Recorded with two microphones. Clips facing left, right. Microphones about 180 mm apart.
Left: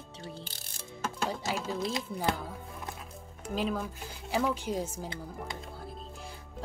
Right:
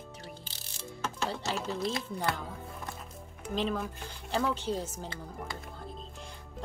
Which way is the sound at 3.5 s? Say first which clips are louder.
Even; 10° left (ahead or behind).